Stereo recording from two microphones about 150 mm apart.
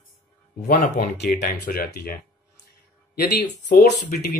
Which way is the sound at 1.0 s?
80° left.